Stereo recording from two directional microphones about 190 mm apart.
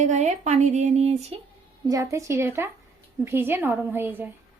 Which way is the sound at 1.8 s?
15° right (ahead or behind).